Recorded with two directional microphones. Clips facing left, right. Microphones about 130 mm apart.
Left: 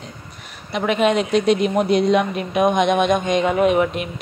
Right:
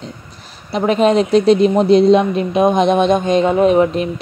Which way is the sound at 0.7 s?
35° right (ahead or behind).